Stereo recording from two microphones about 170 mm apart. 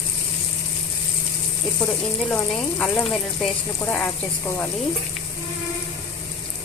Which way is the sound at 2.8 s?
5° left (ahead or behind).